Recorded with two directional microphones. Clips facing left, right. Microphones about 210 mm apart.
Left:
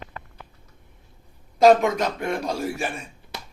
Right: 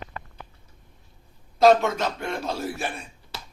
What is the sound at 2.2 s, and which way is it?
Speech, 15° left (ahead or behind).